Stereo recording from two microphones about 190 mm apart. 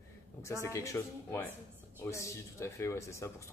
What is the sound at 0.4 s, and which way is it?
Speech, 15° left (ahead or behind).